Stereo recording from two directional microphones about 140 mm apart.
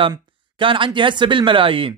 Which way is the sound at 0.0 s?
35° right (ahead or behind).